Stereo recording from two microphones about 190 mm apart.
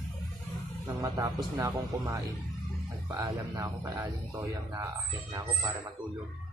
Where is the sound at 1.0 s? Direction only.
15° right (ahead or behind).